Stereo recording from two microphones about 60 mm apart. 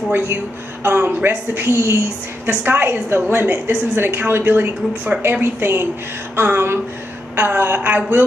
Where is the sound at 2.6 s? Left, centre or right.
Right.